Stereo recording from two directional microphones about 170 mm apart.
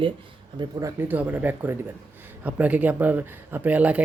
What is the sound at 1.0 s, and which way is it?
Speech, 10° right (ahead or behind).